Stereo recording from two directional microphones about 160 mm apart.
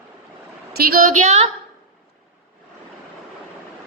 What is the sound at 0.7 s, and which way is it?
Speech, 65° right (ahead or behind).